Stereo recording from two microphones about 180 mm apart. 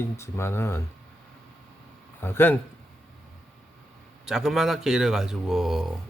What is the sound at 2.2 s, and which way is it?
Speech, 10° left (ahead or behind).